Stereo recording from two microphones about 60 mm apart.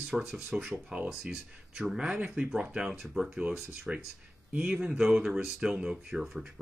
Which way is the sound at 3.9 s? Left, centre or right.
Centre.